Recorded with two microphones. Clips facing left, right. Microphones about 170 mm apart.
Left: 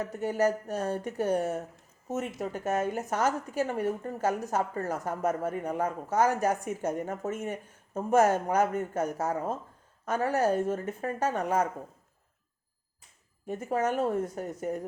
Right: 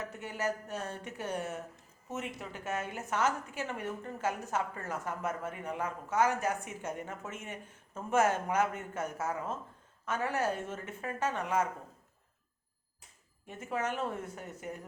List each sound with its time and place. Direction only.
0.1 s a woman's voice: 40° left (ahead or behind)
13.5 s a woman's voice: 40° left (ahead or behind)